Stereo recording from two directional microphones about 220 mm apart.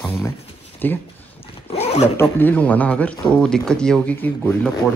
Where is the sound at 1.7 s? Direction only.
30° left (ahead or behind).